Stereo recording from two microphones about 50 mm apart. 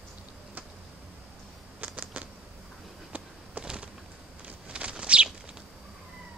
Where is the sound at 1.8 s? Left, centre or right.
Right.